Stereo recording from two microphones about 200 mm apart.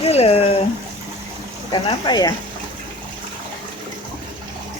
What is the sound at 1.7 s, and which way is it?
Speech, 20° left (ahead or behind).